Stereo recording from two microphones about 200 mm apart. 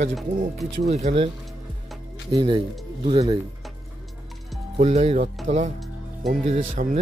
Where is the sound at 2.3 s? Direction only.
20° right (ahead or behind).